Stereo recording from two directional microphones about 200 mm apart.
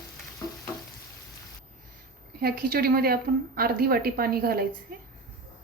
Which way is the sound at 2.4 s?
50° right (ahead or behind).